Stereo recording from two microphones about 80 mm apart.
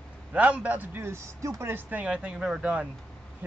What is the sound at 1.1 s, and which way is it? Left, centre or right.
Speech, right.